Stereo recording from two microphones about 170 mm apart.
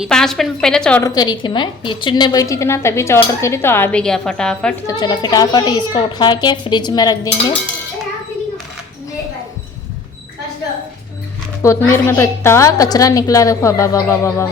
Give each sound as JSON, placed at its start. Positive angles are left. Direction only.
{"t": 0.0, "sound": "a woman's voice", "side_deg": 5}
{"t": 1.0, "sound": "a woman's voice", "side_deg": 25}
{"t": 4.9, "sound": "a woman's voice", "side_deg": 25}
{"t": 11.6, "sound": "a woman's voice", "side_deg": 15}